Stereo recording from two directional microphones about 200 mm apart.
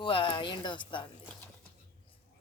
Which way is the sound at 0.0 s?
25° left (ahead or behind).